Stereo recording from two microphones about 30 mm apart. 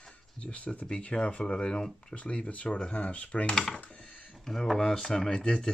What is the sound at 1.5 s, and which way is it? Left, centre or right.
Speech, left.